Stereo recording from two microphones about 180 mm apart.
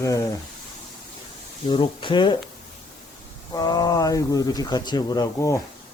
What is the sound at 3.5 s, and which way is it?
Speech, 20° left (ahead or behind).